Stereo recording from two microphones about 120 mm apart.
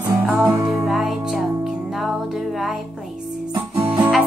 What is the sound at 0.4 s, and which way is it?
Music, 25° right (ahead or behind).